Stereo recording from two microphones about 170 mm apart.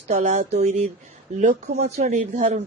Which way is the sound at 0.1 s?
45° right (ahead or behind).